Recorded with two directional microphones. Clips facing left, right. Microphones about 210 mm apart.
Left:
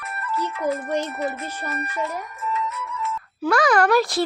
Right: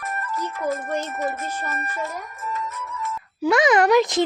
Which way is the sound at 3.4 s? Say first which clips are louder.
Right 1 dB; 20° right (ahead or behind).